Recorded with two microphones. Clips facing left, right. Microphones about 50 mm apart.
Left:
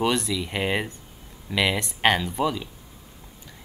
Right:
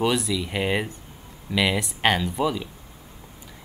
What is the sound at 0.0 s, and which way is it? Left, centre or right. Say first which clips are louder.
Speech: right 1 dB; centre.